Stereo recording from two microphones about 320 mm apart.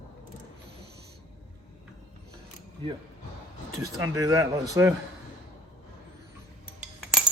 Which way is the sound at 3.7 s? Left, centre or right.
Centre.